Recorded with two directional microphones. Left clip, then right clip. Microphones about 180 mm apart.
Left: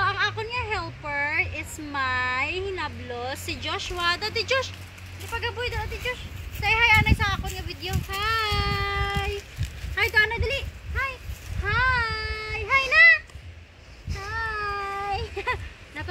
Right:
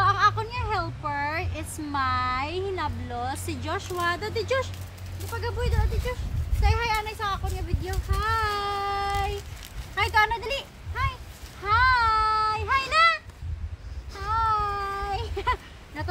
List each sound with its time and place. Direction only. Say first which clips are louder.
0.0 s a sound: right 3 dB; 30° right (ahead or behind)
5.4 s speech: left 1 dB; 15° left (ahead or behind); by 8.0 s centre (ahead or behind)
8.2 s child singing: left 1 dB; 15° right (ahead or behind)
9.9 s speech: left 1 dB; 15° right (ahead or behind)
11.6 s child singing: right 3 dB; 5° right (ahead or behind)
14.1 s a sound: right 5 dB; 10° right (ahead or behind)